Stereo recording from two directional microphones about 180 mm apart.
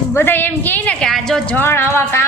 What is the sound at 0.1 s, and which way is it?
A woman's voice, 10° left (ahead or behind).